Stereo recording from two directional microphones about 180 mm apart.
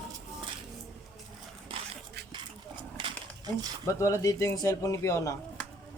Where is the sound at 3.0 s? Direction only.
25° right (ahead or behind).